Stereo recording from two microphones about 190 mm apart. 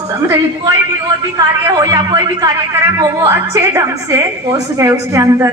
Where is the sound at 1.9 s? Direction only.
20° right (ahead or behind).